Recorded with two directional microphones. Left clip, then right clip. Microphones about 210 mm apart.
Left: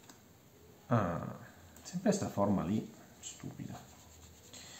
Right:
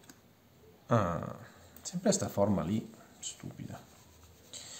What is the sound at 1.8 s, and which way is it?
Speech, 40° right (ahead or behind).